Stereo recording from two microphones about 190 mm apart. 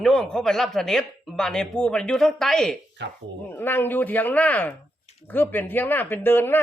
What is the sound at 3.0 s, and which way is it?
Speech, 65° right (ahead or behind).